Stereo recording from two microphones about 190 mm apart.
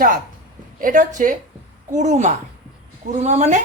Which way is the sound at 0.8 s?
45° right (ahead or behind).